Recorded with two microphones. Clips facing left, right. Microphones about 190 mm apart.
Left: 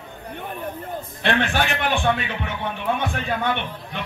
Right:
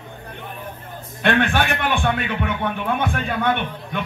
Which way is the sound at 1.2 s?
55° right (ahead or behind).